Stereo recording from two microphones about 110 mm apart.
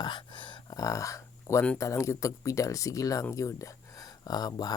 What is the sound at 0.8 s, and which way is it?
Speech, 30° left (ahead or behind).